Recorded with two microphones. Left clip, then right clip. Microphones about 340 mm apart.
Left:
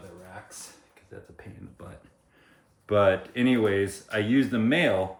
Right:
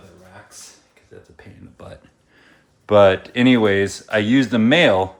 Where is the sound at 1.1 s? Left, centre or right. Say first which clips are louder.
Right 2 dB; centre.